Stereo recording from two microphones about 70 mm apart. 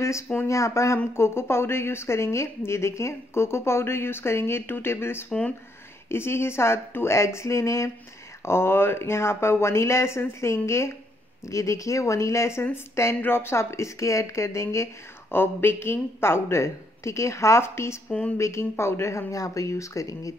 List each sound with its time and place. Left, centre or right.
0.5 s a woman's voice: left
8.5 s a woman's voice: left
15.3 s a woman's voice: left